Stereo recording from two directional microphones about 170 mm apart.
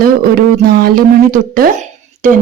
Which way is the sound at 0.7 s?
60° right (ahead or behind).